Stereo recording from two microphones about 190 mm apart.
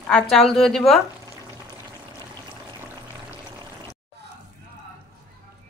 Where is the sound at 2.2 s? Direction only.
20° right (ahead or behind).